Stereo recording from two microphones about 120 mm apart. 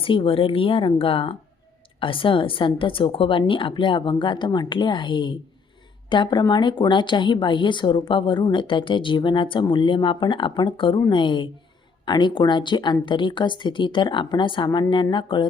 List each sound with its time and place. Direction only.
0.0 s a woman's voice: 50° left (ahead or behind)